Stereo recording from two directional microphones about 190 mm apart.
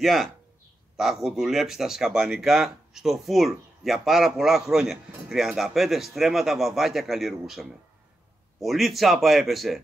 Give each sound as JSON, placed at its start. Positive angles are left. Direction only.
{"t": 0.0, "sound": "speech", "side_deg": 0}